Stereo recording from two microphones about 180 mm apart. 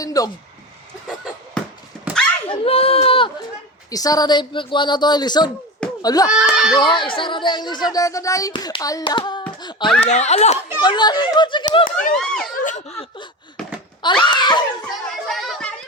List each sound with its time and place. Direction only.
0.0 s speech: 20° left (ahead or behind)
2.1 s a sound: 10° right (ahead or behind)
2.5 s a sound: 35° left (ahead or behind)
3.8 s speech: 20° left (ahead or behind)
6.2 s speech: 5° right (ahead or behind)
6.7 s speech: 25° left (ahead or behind)
9.6 s a sound: 25° left (ahead or behind)
10.0 s speech: 40° left (ahead or behind)
10.8 s speech: 25° left (ahead or behind)
11.9 s speech: 45° left (ahead or behind)
12.1 s speech: 5° left (ahead or behind)
12.6 s laughter: 40° left (ahead or behind)
14.0 s speech: 25° left (ahead or behind)
14.8 s children playing: centre (ahead or behind)